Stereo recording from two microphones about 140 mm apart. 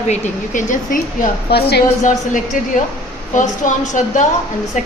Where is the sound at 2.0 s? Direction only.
65° left (ahead or behind).